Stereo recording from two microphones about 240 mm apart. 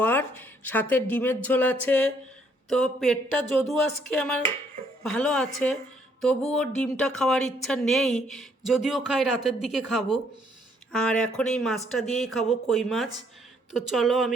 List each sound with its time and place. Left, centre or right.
0.0 s a woman's voice: centre
4.2 s a woman's voice: centre